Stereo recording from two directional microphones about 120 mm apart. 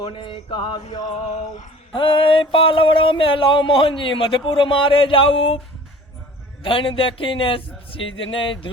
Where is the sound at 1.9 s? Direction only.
45° left (ahead or behind).